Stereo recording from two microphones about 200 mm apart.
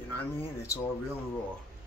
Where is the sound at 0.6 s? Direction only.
15° left (ahead or behind).